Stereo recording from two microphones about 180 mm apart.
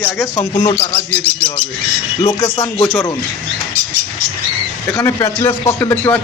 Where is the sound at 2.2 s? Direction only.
20° left (ahead or behind).